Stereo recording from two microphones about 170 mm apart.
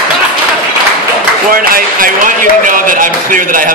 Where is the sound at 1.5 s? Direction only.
55° right (ahead or behind).